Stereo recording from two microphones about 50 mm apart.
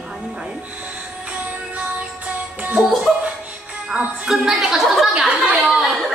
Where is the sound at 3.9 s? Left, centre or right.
Right.